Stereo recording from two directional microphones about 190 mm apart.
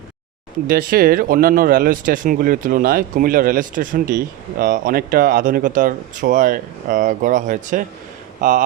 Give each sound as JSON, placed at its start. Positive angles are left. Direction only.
{"t": 0.7, "sound": "speech", "side_deg": -50}